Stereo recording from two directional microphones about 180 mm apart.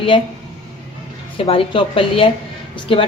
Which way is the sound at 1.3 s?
30° left (ahead or behind).